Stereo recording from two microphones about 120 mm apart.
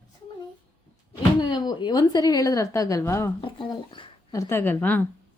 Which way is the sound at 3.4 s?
40° left (ahead or behind).